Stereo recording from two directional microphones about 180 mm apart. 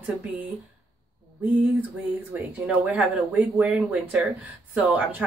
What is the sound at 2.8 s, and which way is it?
Speech, 5° right (ahead or behind).